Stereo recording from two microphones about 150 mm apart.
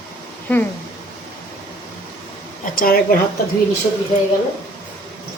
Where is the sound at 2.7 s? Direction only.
70° left (ahead or behind).